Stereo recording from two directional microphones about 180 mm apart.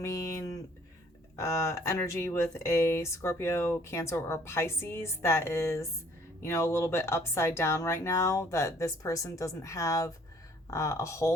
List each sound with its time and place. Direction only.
0.0 s speech: 15° left (ahead or behind)